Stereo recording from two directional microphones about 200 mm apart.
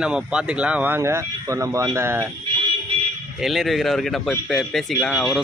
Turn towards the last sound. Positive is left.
turn(degrees=0)  # may be behind; listen again after turning